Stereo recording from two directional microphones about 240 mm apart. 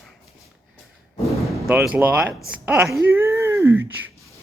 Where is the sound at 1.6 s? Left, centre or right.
Centre.